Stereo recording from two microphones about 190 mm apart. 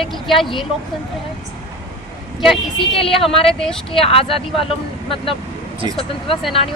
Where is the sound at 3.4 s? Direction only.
Centre (ahead or behind).